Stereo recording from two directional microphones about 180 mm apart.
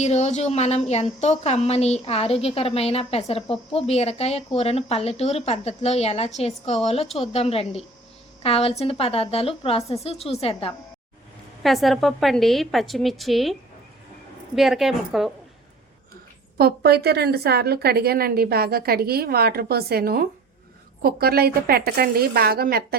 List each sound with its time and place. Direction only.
0.0 s a woman's voice: 40° left (ahead or behind)
11.6 s a woman's voice: centre (ahead or behind)
16.6 s a woman's voice: 60° right (ahead or behind)